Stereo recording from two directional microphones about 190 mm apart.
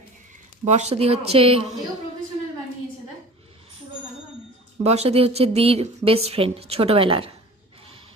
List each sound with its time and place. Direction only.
0.6 s a woman's voice: 35° right (ahead or behind)
4.8 s a woman's voice: 35° right (ahead or behind)